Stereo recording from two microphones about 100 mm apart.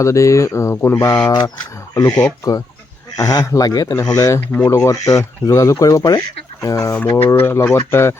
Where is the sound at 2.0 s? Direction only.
35° left (ahead or behind).